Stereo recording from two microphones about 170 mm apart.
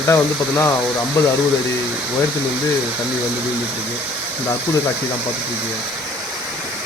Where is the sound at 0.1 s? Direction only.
15° left (ahead or behind).